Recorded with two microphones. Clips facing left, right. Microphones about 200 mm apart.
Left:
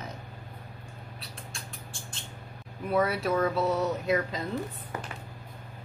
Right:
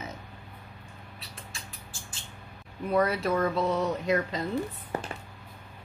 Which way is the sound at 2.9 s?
5° left (ahead or behind).